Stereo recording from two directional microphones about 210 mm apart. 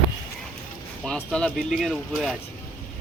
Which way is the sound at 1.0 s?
5° left (ahead or behind).